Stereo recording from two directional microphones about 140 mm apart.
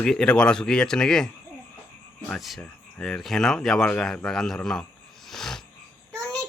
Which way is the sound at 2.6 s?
5° left (ahead or behind).